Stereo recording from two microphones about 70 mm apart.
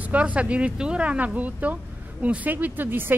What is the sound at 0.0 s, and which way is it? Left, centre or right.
A woman's voice, right.